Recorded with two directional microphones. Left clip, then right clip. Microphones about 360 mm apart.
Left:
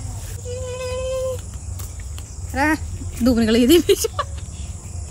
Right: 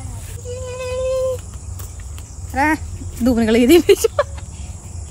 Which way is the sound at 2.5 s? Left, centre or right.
Centre.